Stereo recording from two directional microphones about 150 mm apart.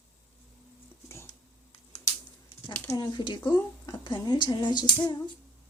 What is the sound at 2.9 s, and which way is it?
Speech, 25° left (ahead or behind).